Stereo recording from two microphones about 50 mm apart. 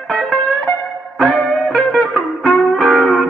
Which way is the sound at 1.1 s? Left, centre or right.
Centre.